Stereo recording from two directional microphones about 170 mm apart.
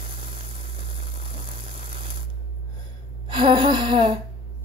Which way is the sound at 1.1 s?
35° right (ahead or behind).